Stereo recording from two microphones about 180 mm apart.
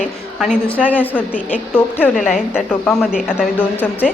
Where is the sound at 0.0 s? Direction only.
5° right (ahead or behind).